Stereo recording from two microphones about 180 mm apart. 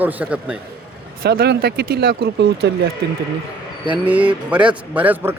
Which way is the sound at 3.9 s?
10° right (ahead or behind).